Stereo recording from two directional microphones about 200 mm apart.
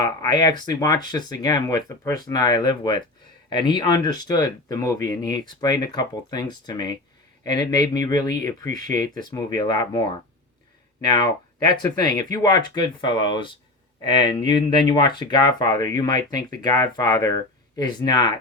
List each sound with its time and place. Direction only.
0.0 s speech: 20° left (ahead or behind)